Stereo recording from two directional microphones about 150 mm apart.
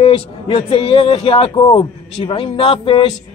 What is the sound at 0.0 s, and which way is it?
A man's voice, 35° left (ahead or behind).